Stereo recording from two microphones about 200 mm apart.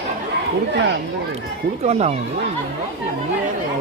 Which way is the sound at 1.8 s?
35° right (ahead or behind).